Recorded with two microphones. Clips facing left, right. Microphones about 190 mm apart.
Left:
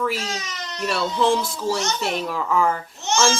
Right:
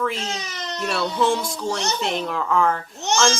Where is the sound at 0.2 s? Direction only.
30° right (ahead or behind).